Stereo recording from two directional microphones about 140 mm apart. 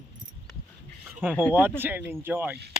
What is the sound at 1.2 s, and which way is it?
Speech, 10° right (ahead or behind).